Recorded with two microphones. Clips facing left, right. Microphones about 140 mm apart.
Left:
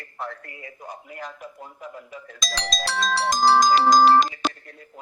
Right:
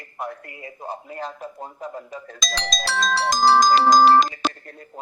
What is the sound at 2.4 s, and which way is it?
Music, 90° right.